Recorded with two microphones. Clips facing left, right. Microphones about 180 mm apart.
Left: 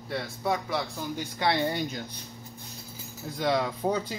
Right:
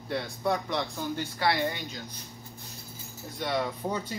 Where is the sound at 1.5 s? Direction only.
35° left (ahead or behind).